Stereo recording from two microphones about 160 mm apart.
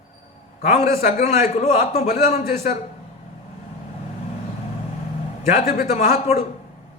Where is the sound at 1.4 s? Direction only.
40° left (ahead or behind).